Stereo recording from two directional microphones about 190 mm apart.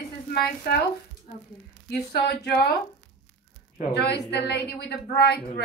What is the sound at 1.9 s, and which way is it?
Speech, 60° left (ahead or behind).